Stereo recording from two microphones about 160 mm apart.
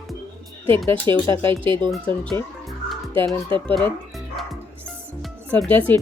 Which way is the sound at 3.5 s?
30° right (ahead or behind).